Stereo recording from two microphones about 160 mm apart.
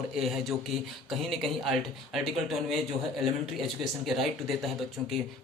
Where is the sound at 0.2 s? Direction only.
Centre (ahead or behind).